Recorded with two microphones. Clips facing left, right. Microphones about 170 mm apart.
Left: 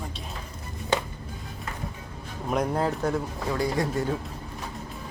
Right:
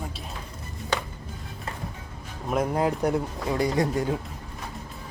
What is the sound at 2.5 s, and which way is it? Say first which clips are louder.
Speech: right 1 dB; 5° right (ahead or behind).